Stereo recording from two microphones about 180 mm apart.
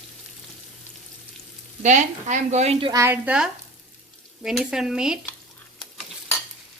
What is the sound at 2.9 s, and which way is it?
A woman's voice, 15° right (ahead or behind).